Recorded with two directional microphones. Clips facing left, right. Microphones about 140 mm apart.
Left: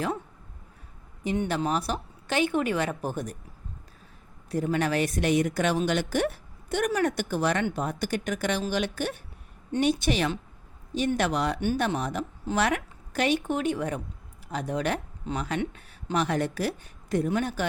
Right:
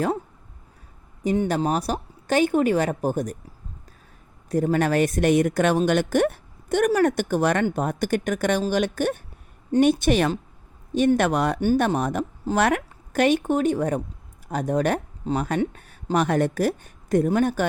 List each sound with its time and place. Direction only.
1.2 s speech: 40° right (ahead or behind)
4.4 s speech: 45° right (ahead or behind)